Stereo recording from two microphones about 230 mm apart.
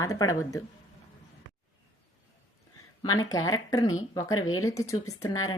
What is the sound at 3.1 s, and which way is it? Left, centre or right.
Speech, left.